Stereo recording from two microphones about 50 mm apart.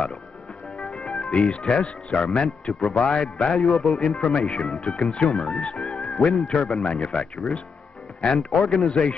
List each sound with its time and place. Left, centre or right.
0.7 s music: centre
1.2 s speech: centre
3.6 s a man's voice: centre
4.4 s speech: centre
4.7 s speech: centre
6.3 s a man's voice: centre